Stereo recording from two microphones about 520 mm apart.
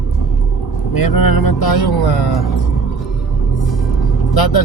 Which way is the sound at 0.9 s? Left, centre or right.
Left.